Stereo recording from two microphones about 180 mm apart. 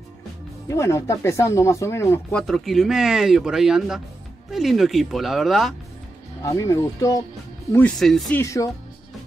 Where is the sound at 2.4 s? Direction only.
Centre (ahead or behind).